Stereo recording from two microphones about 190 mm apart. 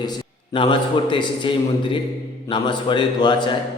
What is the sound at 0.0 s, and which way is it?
A man's voice, 25° left (ahead or behind).